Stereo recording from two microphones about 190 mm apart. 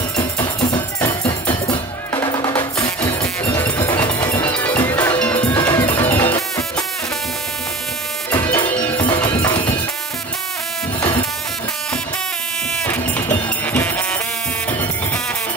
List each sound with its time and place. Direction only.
0.2 s music: 20° left (ahead or behind)
3.2 s music: 10° left (ahead or behind)
8.3 s music: 10° left (ahead or behind)
9.0 s music: 25° left (ahead or behind)
11.0 s a sound: 25° left (ahead or behind)
12.8 s music: 10° left (ahead or behind)